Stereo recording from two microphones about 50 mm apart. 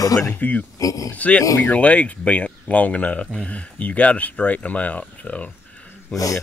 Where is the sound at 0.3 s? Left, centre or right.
Left.